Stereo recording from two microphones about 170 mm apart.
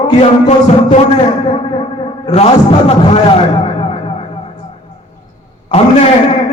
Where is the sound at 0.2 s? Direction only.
35° left (ahead or behind).